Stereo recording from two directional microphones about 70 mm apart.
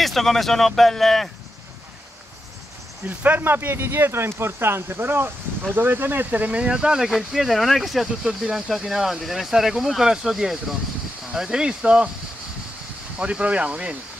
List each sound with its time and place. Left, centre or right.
0.0 s speech: centre
3.1 s speech: right
13.2 s speech: centre